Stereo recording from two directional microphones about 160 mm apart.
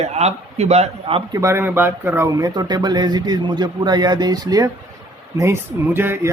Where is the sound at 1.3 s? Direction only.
20° right (ahead or behind).